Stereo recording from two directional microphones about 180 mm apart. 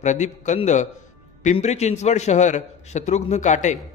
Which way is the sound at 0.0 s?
40° left (ahead or behind).